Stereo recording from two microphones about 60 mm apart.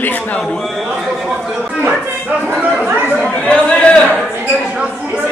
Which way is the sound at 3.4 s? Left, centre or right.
Centre.